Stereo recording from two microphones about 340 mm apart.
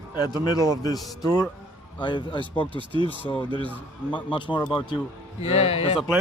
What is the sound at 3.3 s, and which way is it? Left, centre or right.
A man's voice, centre.